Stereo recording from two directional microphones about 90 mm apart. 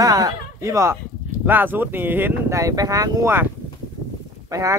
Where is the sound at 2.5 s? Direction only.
40° right (ahead or behind).